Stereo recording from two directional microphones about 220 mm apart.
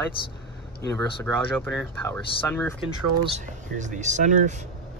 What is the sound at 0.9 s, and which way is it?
Speech, 10° left (ahead or behind).